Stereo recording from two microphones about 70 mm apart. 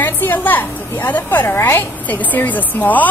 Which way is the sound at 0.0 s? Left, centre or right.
Left.